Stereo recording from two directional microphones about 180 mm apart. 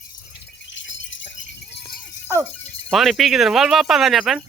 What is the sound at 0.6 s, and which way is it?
Jingle bell, 90° left.